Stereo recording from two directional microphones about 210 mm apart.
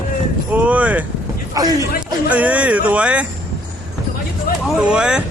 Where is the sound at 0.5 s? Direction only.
5° right (ahead or behind).